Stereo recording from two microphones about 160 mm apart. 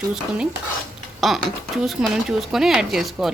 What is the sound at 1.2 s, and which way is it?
Speech, centre (ahead or behind).